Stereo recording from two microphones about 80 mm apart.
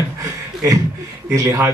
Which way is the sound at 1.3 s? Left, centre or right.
Right.